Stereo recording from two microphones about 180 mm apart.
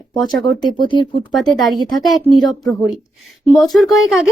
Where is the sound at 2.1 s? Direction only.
Centre (ahead or behind).